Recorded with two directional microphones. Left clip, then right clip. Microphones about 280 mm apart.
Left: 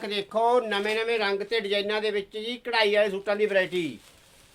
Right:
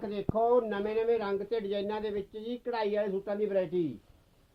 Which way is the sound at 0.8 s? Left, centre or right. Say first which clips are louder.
Left 4 dB; centre.